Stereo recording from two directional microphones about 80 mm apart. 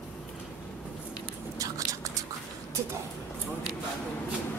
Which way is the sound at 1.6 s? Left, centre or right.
Right.